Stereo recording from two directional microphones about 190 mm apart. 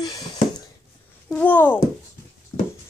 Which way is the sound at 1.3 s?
10° left (ahead or behind).